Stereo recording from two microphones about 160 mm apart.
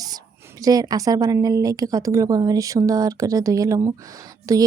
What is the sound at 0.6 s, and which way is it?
Speech, 20° right (ahead or behind).